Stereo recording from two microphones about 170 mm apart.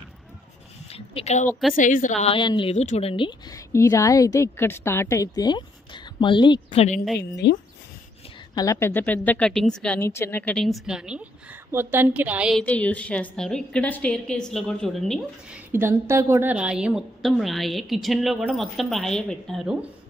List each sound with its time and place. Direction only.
0.8 s a woman's voice: 35° left (ahead or behind)
2.7 s a woman's voice: 40° left (ahead or behind)
7.2 s speech: 80° left
8.5 s a woman's voice: 15° left (ahead or behind); by 12.6 s 5° right (ahead or behind)
12.6 s a woman's voice: 5° left (ahead or behind)
15.7 s a woman's voice: 15° right (ahead or behind)